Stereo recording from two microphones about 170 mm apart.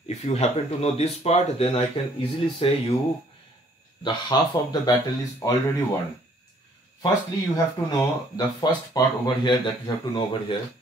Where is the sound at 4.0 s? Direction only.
25° left (ahead or behind).